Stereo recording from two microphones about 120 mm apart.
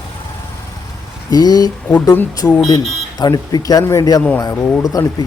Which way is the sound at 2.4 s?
15° left (ahead or behind).